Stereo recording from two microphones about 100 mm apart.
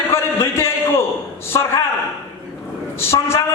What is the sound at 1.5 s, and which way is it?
Speech, 35° left (ahead or behind).